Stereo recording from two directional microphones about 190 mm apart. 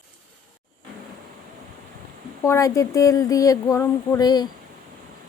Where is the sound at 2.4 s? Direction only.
15° left (ahead or behind).